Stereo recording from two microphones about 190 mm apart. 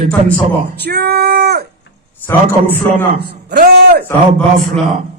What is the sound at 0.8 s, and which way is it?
Speech, 55° right (ahead or behind).